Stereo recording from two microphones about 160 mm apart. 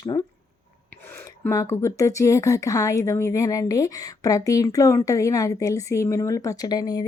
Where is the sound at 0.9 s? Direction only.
15° left (ahead or behind).